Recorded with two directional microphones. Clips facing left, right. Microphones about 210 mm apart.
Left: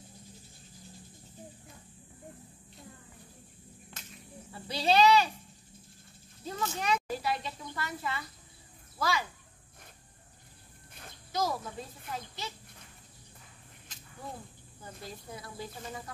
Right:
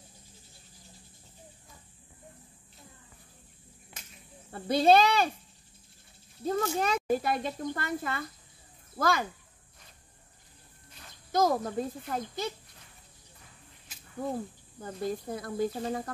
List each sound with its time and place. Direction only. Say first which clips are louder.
3.9 s a sound: even; 10° right (ahead or behind)
4.5 s speech: right 7 dB; 55° right (ahead or behind)
6.4 s speech: right 6 dB; 50° right (ahead or behind)
11.3 s speech: right 7 dB; 50° right (ahead or behind)
14.2 s speech: right 11 dB; 45° right (ahead or behind)